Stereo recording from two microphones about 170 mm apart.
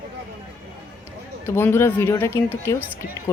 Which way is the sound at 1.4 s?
15° left (ahead or behind).